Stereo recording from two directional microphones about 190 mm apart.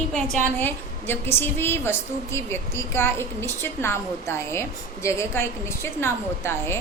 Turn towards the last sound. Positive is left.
turn(degrees=15)  # may be behind; listen again after turning